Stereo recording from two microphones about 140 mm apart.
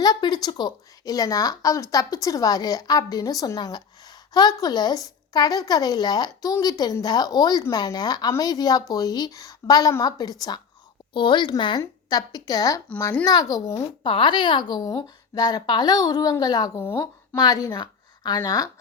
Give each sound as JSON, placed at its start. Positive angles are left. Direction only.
{"t": 0.0, "sound": "a woman's voice", "side_deg": 30}
{"t": 14.0, "sound": "a woman's voice", "side_deg": 35}